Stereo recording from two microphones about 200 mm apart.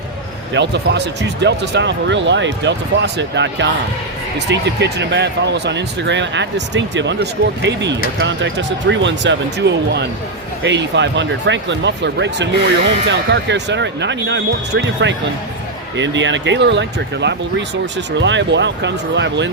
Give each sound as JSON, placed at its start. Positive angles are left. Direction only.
{"t": 0.5, "sound": "speech", "side_deg": -60}